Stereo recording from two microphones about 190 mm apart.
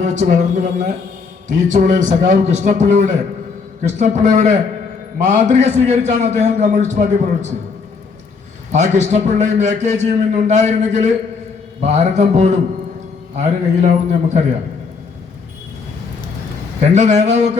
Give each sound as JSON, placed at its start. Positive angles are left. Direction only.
{"t": 0.0, "sound": "a man's voice", "side_deg": -40}
{"t": 8.7, "sound": "a man's voice", "side_deg": -40}
{"t": 16.8, "sound": "a man's voice", "side_deg": -35}